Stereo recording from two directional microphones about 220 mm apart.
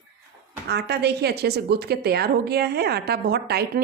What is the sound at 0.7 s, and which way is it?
A woman's voice, 50° right (ahead or behind).